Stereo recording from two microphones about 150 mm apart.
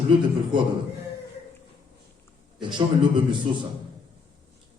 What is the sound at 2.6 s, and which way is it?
Speech, 30° right (ahead or behind).